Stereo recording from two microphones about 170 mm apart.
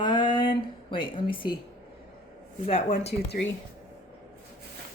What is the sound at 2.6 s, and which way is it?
Speech, 40° left (ahead or behind).